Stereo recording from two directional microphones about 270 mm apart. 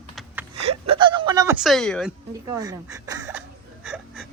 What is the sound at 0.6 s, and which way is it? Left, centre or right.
Speech, centre.